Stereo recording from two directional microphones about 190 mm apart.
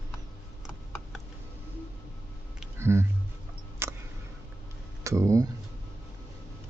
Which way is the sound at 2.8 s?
15° right (ahead or behind).